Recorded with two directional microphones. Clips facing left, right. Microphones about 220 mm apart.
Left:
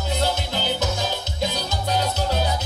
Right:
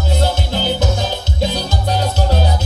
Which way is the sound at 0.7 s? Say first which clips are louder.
Right 5 dB; 30° right (ahead or behind).